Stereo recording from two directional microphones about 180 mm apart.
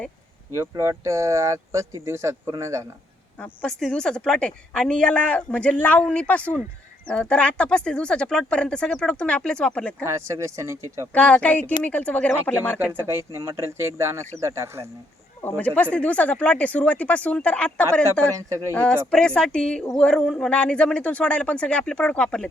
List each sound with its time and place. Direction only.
0.5 s speech: 15° right (ahead or behind)
3.4 s speech: 5° left (ahead or behind)
10.0 s speech: 15° right (ahead or behind)
11.1 s speech: 5° left (ahead or behind)
12.8 s speech: 10° right (ahead or behind)
15.4 s speech: 10° left (ahead or behind)
18.4 s speech: 15° right (ahead or behind)
18.7 s speech: 5° left (ahead or behind)